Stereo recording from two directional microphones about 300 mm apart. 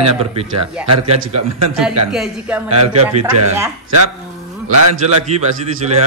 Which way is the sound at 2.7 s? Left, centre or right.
Right.